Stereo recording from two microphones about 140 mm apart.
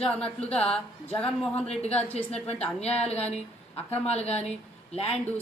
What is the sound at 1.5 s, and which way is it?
A woman's voice, 50° left (ahead or behind).